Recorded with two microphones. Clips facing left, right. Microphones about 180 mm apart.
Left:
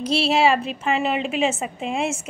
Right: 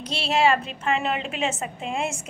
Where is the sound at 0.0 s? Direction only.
10° left (ahead or behind).